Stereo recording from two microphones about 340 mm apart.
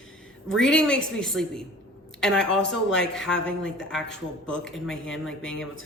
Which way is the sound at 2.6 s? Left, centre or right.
Left.